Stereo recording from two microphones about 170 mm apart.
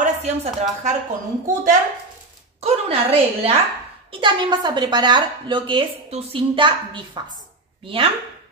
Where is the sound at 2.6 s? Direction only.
35° right (ahead or behind).